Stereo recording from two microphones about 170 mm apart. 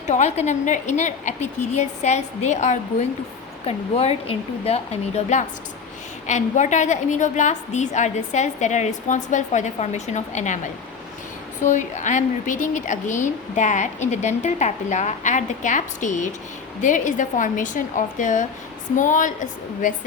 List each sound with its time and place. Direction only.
0.1 s a woman's voice: 45° left (ahead or behind)
11.6 s a woman's voice: 45° left (ahead or behind)